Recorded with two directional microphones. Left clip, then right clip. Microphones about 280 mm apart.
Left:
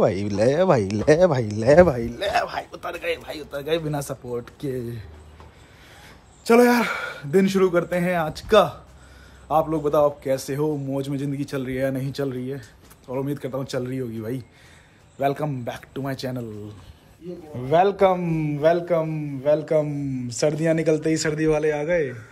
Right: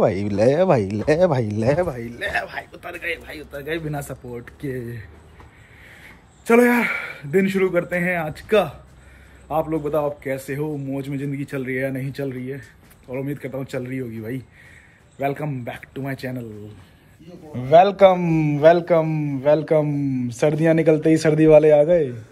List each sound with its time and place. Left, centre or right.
0.0 s a man's voice: centre
1.8 s speech: left
2.0 s a man's voice: centre
6.4 s a man's voice: centre
17.6 s a man's voice: centre